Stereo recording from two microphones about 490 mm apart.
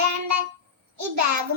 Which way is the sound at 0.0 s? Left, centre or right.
Right.